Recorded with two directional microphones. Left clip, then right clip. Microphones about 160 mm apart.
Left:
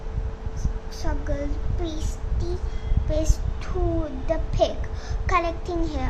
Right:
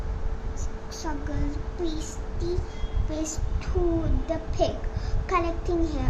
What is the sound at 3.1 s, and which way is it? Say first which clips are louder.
A child's voice: left 5 dB; 20° left (ahead or behind).